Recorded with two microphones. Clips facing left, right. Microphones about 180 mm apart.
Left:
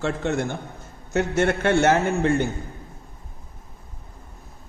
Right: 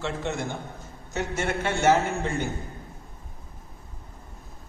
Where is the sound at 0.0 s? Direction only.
50° left (ahead or behind).